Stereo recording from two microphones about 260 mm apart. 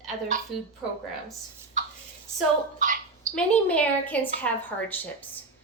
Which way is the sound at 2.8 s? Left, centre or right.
Right.